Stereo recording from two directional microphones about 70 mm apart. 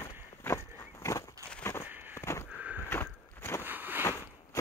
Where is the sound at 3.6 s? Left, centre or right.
Right.